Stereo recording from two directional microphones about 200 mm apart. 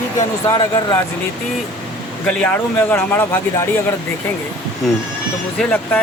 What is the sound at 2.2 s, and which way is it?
Speech, 5° left (ahead or behind).